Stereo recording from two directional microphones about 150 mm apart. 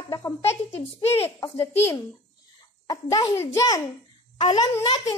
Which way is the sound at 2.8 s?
25° left (ahead or behind).